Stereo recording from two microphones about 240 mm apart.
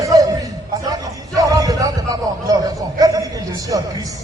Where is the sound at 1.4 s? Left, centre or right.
Centre.